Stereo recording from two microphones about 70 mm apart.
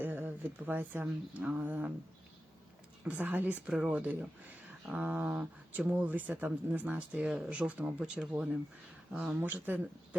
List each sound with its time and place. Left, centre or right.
0.0 s speech: right
3.0 s speech: right
3.7 s speech: centre
9.4 s speech: right